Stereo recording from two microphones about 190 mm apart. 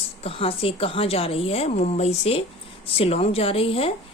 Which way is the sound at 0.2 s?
30° left (ahead or behind).